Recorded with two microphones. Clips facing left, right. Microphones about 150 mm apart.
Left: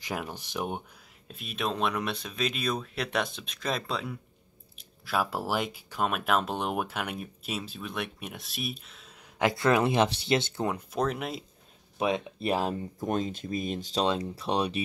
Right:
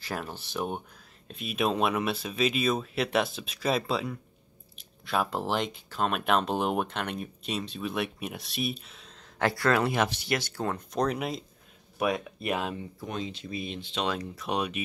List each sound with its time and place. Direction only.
0.0 s speech: 15° left (ahead or behind)
1.2 s speech: centre (ahead or behind)
1.5 s speech: 10° right (ahead or behind)
9.4 s speech: 15° left (ahead or behind)
10.9 s speech: centre (ahead or behind)
12.0 s speech: 25° left (ahead or behind)